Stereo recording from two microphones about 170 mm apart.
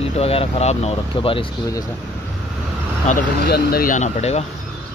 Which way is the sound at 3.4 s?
65° left (ahead or behind).